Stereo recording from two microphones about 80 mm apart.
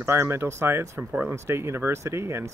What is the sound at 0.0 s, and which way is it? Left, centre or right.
Speech, right.